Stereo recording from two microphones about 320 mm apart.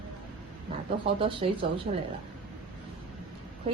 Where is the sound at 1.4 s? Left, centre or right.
Centre.